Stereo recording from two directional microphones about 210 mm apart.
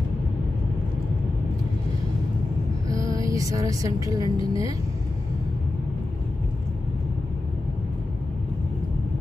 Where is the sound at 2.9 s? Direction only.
15° right (ahead or behind).